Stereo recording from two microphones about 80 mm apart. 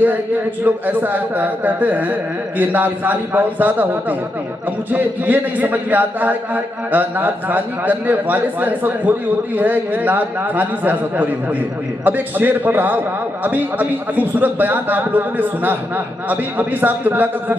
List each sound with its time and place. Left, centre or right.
0.7 s a man's voice: right
4.9 s a man's voice: right